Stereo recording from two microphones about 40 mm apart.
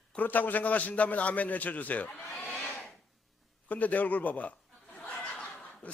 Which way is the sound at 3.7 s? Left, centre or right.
Left.